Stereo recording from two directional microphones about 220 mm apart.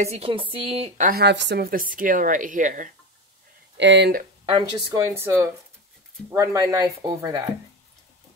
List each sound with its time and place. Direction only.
0.0 s a woman's voice: 25° right (ahead or behind)
3.7 s speech: 55° right (ahead or behind)
4.5 s speech: 20° right (ahead or behind)